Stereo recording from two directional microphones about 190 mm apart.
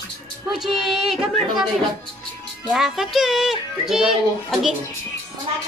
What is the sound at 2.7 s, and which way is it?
Speech, centre (ahead or behind).